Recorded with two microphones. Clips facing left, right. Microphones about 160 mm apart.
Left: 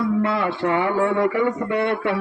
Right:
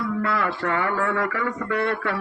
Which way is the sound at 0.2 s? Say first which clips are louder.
Left 4 dB; 25° left (ahead or behind).